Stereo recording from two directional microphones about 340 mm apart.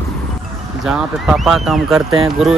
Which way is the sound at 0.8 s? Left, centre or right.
Centre.